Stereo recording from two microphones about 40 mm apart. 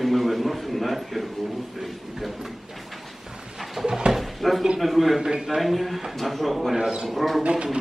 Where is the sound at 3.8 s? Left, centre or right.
Centre.